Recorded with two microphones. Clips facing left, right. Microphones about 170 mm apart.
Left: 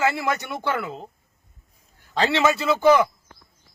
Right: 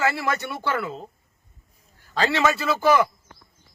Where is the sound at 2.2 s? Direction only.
20° left (ahead or behind).